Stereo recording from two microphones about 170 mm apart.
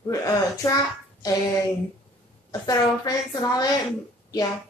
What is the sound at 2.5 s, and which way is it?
A woman's voice, 20° left (ahead or behind).